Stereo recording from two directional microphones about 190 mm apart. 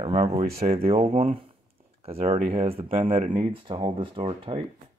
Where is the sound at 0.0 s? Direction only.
30° right (ahead or behind).